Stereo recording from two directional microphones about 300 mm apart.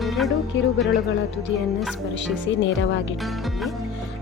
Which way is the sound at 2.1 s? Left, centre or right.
Left.